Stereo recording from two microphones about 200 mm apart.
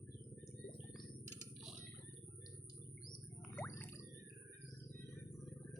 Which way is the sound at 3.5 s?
10° left (ahead or behind).